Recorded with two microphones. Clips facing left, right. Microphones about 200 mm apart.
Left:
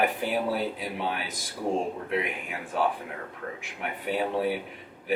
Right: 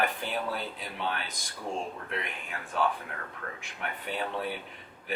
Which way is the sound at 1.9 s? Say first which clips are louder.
Left 7 dB; 10° left (ahead or behind).